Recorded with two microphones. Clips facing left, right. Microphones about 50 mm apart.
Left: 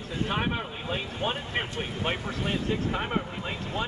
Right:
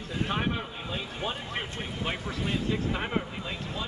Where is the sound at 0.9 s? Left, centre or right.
Left.